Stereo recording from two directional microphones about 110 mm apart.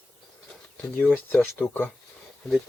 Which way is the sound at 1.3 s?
15° left (ahead or behind).